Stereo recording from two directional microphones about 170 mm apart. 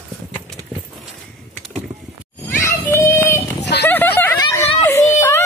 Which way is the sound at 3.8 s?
10° left (ahead or behind).